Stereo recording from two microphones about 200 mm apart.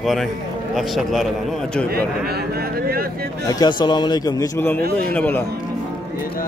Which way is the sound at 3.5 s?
20° left (ahead or behind).